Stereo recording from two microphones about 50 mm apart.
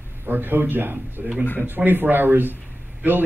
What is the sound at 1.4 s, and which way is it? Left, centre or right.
Speech, left.